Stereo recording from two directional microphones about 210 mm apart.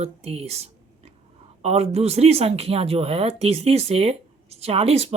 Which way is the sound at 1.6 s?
30° right (ahead or behind).